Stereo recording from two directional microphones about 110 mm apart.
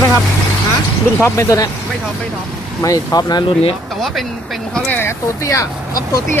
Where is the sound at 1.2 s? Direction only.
25° left (ahead or behind).